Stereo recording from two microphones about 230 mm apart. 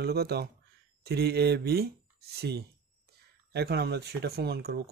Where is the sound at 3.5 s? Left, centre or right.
Right.